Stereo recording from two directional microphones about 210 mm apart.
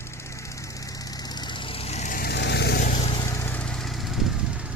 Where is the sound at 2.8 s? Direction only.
30° left (ahead or behind).